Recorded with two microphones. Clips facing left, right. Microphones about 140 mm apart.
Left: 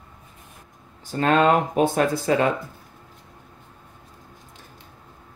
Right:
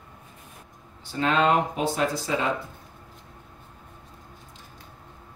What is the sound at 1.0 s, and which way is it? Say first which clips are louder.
Speech: left 4 dB; 45° left (ahead or behind).